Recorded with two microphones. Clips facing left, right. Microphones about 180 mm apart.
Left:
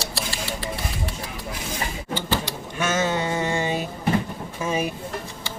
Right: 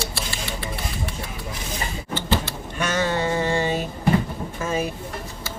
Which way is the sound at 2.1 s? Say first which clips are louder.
Right 2 dB; 10° left (ahead or behind).